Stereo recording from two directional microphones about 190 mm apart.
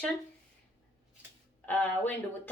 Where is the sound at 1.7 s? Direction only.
10° left (ahead or behind).